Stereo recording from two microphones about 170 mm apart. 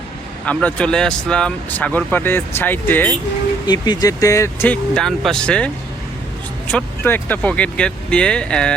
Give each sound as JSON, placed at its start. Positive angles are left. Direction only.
{"t": 0.4, "sound": "speech", "side_deg": 5}
{"t": 3.7, "sound": "speech", "side_deg": 25}